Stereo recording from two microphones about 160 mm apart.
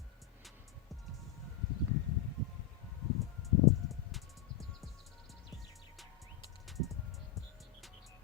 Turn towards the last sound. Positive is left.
turn(degrees=0)  # may be behind; listen again after turning